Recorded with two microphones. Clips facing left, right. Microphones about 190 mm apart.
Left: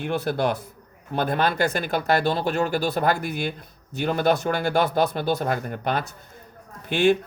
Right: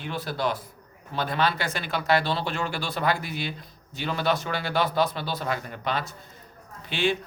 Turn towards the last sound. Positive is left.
turn(degrees=50)  # may be behind; listen again after turning